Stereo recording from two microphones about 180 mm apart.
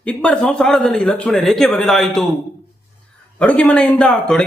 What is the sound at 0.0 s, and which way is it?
A man's voice, 5° left (ahead or behind).